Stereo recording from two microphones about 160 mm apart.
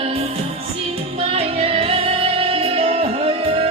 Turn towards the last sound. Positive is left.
turn(degrees=-40)  # may be behind; listen again after turning